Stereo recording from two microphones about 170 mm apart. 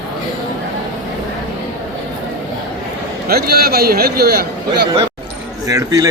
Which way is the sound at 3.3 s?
65° right (ahead or behind).